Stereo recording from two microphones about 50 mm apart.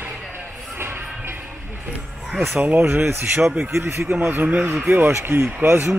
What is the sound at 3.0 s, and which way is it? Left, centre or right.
Speech, right.